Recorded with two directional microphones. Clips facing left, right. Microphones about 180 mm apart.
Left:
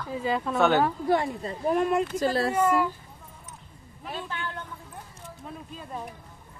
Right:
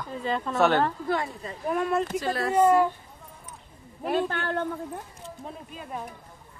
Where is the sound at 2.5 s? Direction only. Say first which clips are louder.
Right 9 dB; 25° right (ahead or behind).